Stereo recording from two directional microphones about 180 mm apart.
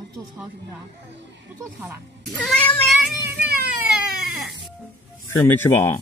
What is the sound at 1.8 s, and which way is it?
Speech, 5° right (ahead or behind).